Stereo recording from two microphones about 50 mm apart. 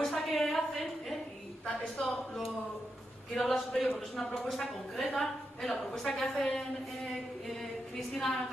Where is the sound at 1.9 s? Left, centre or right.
Left.